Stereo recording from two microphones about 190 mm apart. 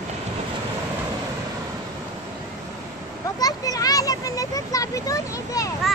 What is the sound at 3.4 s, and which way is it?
A child's voice, 20° left (ahead or behind).